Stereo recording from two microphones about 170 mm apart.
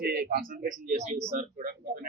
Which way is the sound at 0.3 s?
55° right (ahead or behind).